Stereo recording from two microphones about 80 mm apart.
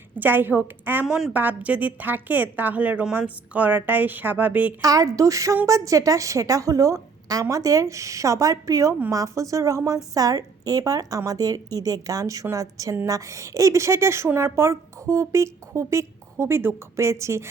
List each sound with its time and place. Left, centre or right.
0.2 s a woman's voice: right
1.0 s a woman's voice: centre
1.3 s a woman's voice: right
4.8 s a woman's voice: right